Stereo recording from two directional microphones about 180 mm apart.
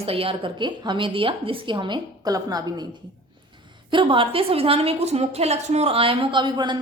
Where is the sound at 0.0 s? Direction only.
30° right (ahead or behind).